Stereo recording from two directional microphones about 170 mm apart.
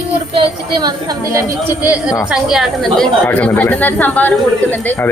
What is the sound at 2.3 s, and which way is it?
A woman's voice, centre (ahead or behind).